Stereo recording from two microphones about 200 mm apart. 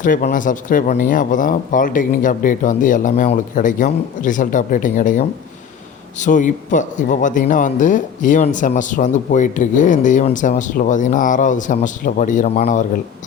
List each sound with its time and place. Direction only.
0.0 s a man's voice: 40° left (ahead or behind)